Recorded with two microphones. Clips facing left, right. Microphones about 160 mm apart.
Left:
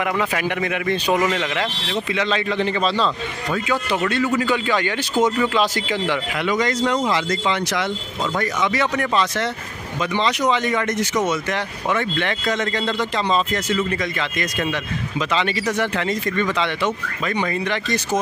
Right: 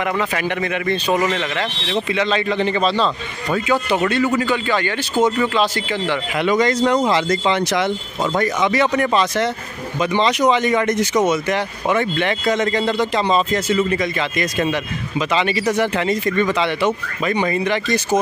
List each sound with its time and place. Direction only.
0.0 s a man's voice: 5° left (ahead or behind)
2.1 s speech: centre (ahead or behind)
4.1 s a man's voice: centre (ahead or behind)
6.3 s speech: 30° right (ahead or behind); by 18.2 s 5° right (ahead or behind)